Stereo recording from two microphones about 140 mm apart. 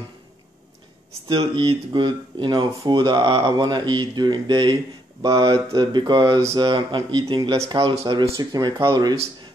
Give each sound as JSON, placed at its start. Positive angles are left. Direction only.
{"t": 1.3, "sound": "speech", "side_deg": -35}